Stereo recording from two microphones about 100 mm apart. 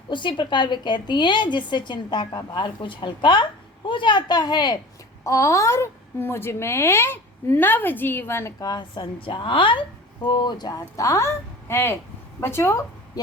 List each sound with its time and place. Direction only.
0.1 s a woman's voice: 55° left (ahead or behind)
5.2 s a woman's voice: 30° left (ahead or behind)
8.6 s a woman's voice: 50° left (ahead or behind); by 12.8 s 25° left (ahead or behind)
13.2 s speech: 40° left (ahead or behind)